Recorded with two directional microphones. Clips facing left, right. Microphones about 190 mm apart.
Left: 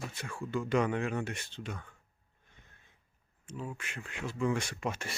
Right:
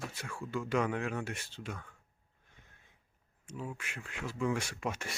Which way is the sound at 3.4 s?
10° right (ahead or behind).